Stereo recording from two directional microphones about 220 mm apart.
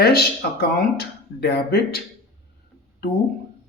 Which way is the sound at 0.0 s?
45° left (ahead or behind).